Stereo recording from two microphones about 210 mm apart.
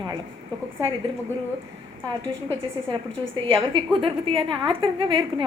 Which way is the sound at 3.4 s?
25° right (ahead or behind).